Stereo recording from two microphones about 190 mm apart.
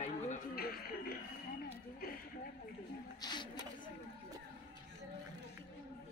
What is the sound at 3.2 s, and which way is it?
Speech, 25° left (ahead or behind).